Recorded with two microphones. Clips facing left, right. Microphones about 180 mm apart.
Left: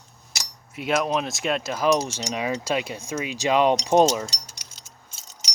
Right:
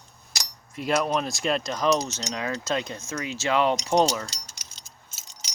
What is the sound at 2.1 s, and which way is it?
Speech, 10° left (ahead or behind).